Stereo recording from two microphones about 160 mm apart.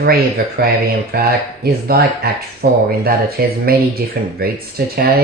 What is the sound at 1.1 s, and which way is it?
Speech, 80° right.